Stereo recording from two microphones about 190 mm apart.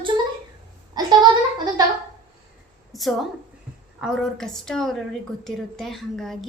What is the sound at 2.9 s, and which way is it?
A woman's voice, centre (ahead or behind).